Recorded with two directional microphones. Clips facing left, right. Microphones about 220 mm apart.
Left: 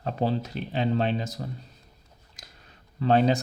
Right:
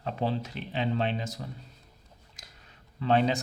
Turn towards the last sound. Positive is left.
turn(degrees=40)  # may be behind; listen again after turning